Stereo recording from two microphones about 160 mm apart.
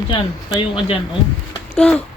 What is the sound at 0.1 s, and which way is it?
Speech, 30° left (ahead or behind).